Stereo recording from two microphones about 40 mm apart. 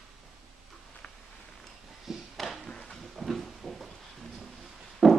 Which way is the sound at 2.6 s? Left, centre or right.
Centre.